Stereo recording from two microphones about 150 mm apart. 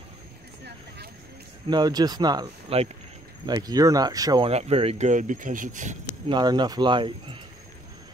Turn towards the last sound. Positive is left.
turn(degrees=-35)  # may be behind; listen again after turning